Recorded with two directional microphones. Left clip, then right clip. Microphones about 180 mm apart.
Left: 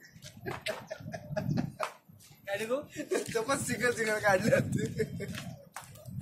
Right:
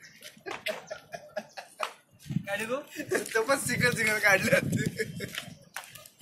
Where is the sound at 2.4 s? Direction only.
30° right (ahead or behind).